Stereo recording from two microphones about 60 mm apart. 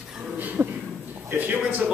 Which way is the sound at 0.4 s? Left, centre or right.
Right.